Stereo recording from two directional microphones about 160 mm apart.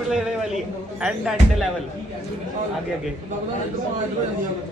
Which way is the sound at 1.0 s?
Centre (ahead or behind).